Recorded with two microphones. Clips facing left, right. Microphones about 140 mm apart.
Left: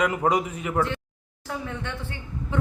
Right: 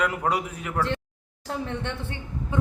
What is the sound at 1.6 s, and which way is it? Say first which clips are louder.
Speech: right 2 dB; 25° right (ahead or behind).